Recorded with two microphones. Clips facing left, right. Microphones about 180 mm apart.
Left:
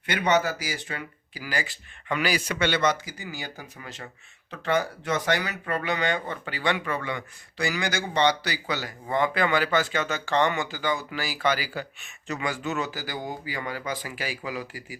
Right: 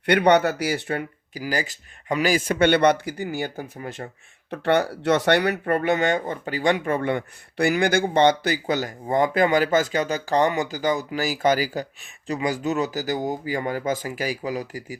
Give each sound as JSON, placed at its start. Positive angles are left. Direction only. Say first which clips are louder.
{"t": 0.0, "sound": "speech", "louder": "right 6 dB", "side_deg": -65}
{"t": 1.4, "sound": "speech", "louder": "right 5 dB", "side_deg": -40}
{"t": 4.5, "sound": "speech", "louder": "right 5 dB", "side_deg": -65}